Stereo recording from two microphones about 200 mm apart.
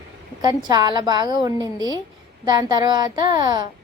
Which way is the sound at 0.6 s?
20° right (ahead or behind).